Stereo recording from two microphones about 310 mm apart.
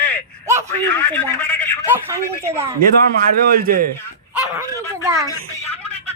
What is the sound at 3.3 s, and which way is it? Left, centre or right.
Speech, right.